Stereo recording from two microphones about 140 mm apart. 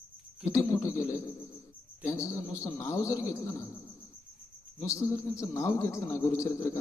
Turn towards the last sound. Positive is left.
turn(degrees=20)  # may be behind; listen again after turning